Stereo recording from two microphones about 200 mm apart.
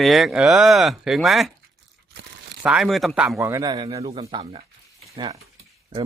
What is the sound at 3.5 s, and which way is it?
Speech, 20° right (ahead or behind).